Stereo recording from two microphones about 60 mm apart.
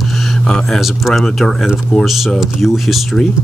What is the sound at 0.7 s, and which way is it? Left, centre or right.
Speech, centre.